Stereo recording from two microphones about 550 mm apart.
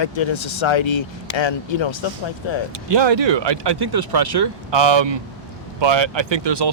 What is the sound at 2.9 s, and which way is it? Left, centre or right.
Speech, right.